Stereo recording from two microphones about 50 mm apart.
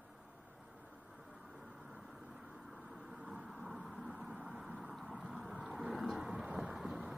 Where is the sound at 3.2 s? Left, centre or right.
Centre.